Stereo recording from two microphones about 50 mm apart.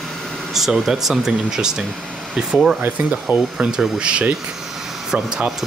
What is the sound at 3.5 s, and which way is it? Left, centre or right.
Speech, centre.